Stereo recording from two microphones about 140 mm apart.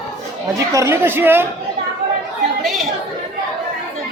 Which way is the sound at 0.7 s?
20° right (ahead or behind).